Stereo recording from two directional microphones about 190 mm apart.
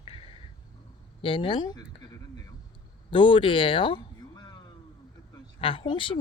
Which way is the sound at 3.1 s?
25° left (ahead or behind).